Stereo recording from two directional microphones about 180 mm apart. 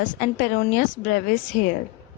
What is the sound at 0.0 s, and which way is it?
A woman's voice, 45° left (ahead or behind).